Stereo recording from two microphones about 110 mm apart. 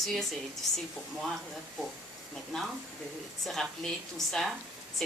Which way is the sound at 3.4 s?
Centre (ahead or behind).